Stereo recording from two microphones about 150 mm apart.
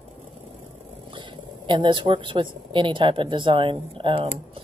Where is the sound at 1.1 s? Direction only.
35° right (ahead or behind).